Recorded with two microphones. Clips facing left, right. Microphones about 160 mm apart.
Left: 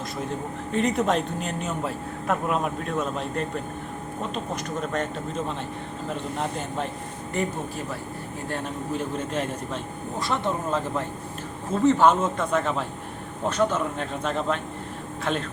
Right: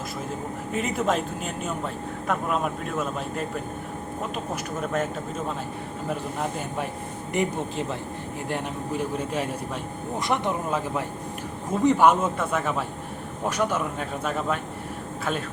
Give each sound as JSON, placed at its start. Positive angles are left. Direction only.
{"t": 0.7, "sound": "speech", "side_deg": -5}
{"t": 7.3, "sound": "a man's voice", "side_deg": -20}